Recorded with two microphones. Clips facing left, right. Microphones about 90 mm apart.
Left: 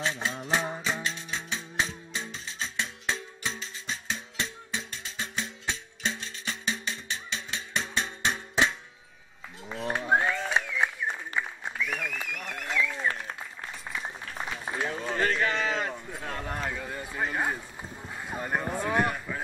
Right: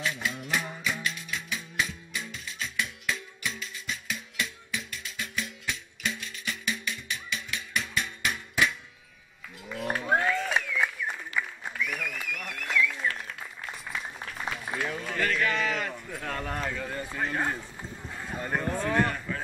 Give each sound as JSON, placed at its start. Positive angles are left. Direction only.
{"t": 0.0, "sound": "music", "side_deg": 30}
{"t": 9.9, "sound": "applause", "side_deg": 25}